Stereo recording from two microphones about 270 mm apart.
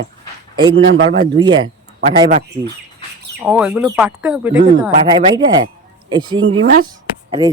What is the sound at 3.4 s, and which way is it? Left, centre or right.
Speech, centre.